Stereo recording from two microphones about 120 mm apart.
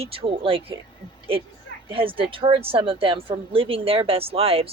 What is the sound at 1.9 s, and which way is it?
A woman's voice, 45° right (ahead or behind).